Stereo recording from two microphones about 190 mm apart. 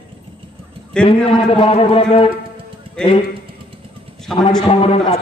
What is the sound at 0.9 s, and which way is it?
Speech, 5° left (ahead or behind).